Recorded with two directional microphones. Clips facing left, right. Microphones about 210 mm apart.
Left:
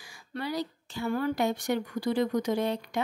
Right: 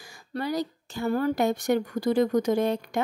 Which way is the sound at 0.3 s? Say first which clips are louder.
Right 4 dB; 45° right (ahead or behind).